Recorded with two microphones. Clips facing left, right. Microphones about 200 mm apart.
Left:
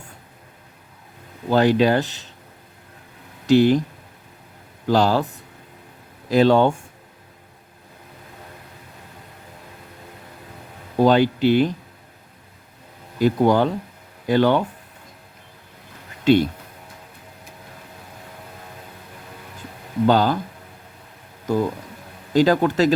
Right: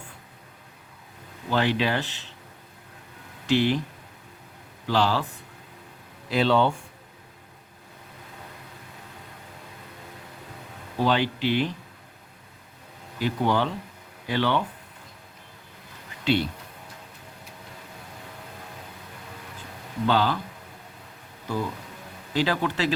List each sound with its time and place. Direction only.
1.5 s speech: 40° left (ahead or behind)
3.4 s speech: 40° left (ahead or behind)
4.9 s speech: 45° left (ahead or behind)
6.3 s speech: 45° left (ahead or behind)
10.9 s speech: 45° left (ahead or behind)
13.1 s speech: 45° left (ahead or behind)
16.2 s speech: 45° left (ahead or behind)
20.1 s speech: 45° left (ahead or behind)
21.4 s speech: 40° left (ahead or behind)